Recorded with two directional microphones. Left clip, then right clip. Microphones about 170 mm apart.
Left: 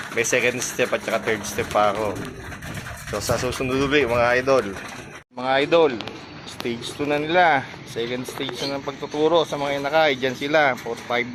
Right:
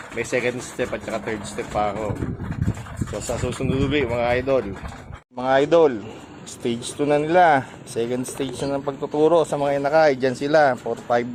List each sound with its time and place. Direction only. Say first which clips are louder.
0.2 s speech: left 3 dB; 15° right (ahead or behind)
3.4 s speech: left 2 dB; 15° right (ahead or behind)
5.4 s speech: right 2 dB; 60° right (ahead or behind); by 8.4 s 80° right
8.7 s speech: right 3 dB; 70° right (ahead or behind)